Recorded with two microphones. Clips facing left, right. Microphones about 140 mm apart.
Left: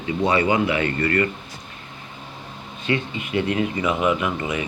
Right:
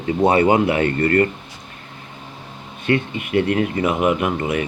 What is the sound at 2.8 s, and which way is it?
Speech, 55° right (ahead or behind).